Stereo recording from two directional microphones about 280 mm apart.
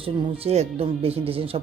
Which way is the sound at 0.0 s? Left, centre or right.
Centre.